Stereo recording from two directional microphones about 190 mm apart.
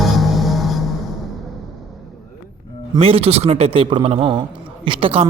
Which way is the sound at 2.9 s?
30° right (ahead or behind).